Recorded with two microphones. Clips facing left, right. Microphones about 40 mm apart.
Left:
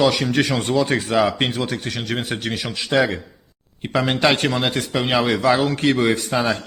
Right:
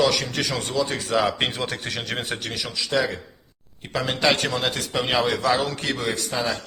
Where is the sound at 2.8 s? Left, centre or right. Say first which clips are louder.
Left 5 dB; left; by 4.8 s centre.